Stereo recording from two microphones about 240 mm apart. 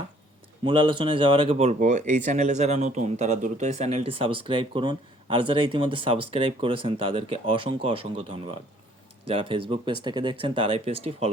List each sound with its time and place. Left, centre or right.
0.6 s speech: right